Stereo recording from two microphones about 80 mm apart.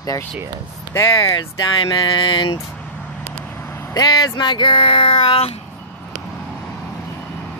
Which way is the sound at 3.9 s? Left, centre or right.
Left.